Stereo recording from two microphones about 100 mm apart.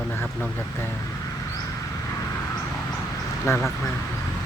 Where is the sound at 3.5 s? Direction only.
30° left (ahead or behind).